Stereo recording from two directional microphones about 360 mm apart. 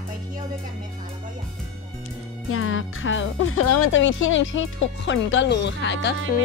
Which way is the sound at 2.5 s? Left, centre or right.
Left.